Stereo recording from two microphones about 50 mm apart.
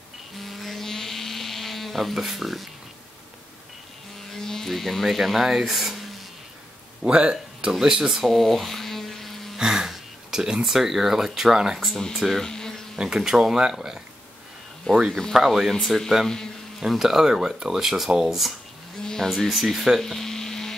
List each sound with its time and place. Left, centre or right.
0.4 s a sound: centre
4.3 s music: centre
5.0 s speech: centre
7.0 s speech: centre
7.8 s electric toothbrush: centre
9.6 s speech: centre
12.2 s speech: centre
12.4 s insect: centre
13.0 s speech: centre
14.9 s speech: centre
15.3 s speech: centre
15.7 s speech: centre
18.9 s speech: centre
20.0 s electric toothbrush: centre